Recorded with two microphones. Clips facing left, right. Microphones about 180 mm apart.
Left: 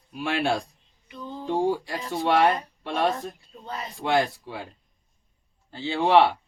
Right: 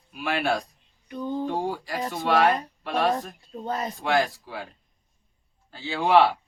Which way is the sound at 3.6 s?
45° right (ahead or behind).